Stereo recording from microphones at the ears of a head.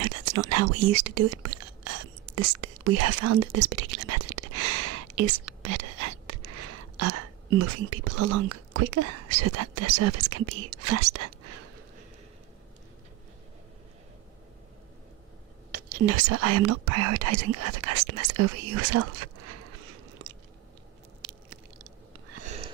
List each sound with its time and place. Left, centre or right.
0.0 s speech: right
15.7 s speech: right
21.2 s a sound: right